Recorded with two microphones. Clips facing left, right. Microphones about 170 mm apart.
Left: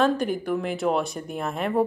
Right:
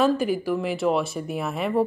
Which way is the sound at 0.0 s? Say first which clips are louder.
Right 1 dB; 5° right (ahead or behind).